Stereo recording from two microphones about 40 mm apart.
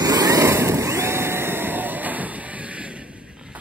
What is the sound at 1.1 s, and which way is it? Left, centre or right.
Train, right.